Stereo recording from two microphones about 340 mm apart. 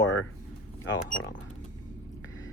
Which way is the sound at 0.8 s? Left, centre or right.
Left.